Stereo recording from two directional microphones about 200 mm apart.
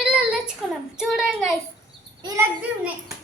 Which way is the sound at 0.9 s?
Centre (ahead or behind).